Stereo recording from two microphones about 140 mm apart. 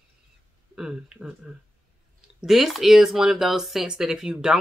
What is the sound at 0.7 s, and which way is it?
Speech, 5° right (ahead or behind).